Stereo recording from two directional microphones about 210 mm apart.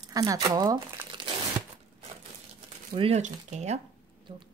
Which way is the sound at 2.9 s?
30° right (ahead or behind).